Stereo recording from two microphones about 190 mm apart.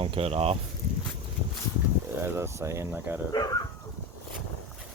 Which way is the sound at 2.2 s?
15° right (ahead or behind).